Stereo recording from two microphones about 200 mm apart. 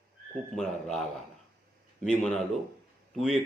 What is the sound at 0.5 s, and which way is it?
A man's voice, centre (ahead or behind).